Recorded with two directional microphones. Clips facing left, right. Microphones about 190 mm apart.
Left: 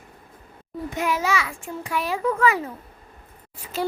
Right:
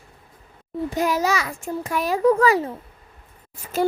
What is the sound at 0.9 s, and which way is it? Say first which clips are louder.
A child's voice: right 2 dB; 35° right (ahead or behind).